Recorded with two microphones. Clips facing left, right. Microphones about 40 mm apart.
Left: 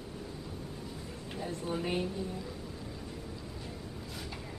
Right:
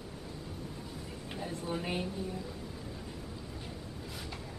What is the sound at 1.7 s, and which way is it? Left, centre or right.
Speech, centre.